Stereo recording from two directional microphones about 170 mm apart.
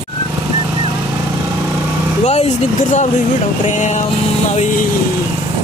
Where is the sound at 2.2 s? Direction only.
40° left (ahead or behind).